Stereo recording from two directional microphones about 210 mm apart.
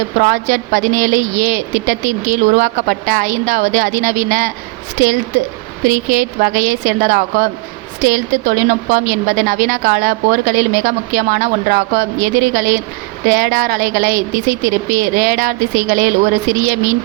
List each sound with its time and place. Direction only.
0.2 s speech: 40° right (ahead or behind)
5.9 s speech: 40° right (ahead or behind)